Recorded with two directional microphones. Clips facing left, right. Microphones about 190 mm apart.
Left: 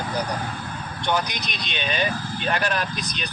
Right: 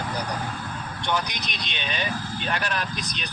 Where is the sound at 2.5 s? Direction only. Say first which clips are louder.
Left 4 dB; 45° left (ahead or behind).